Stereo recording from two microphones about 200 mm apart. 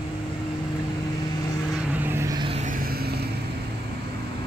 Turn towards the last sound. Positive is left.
turn(degrees=-50)  # may be behind; listen again after turning